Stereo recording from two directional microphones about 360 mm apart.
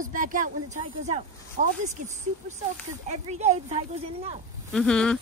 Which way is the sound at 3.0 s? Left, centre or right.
Centre.